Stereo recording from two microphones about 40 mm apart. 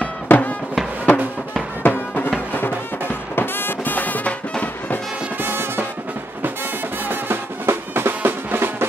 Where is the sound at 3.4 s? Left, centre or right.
Left.